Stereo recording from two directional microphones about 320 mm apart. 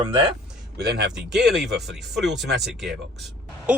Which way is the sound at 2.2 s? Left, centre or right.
Centre.